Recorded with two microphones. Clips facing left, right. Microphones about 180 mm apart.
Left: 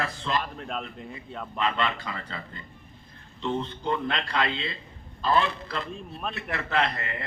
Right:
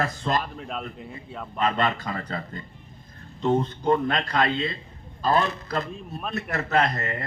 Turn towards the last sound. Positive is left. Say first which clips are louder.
# right 4 dB
turn(degrees=-40)  # may be behind; listen again after turning